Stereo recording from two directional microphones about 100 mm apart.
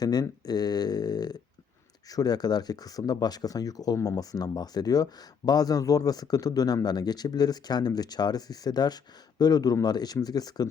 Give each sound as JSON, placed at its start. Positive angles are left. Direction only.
{"t": 0.0, "sound": "speech", "side_deg": 40}